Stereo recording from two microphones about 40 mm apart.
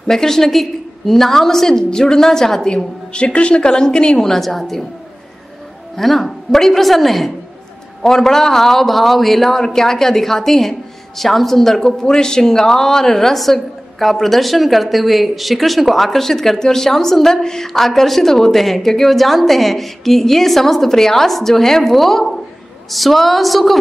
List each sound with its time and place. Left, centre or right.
0.0 s a man's voice: centre
4.3 s a man's voice: centre
5.9 s a woman's voice: centre